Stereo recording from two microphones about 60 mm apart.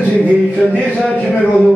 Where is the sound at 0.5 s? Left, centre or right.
Left.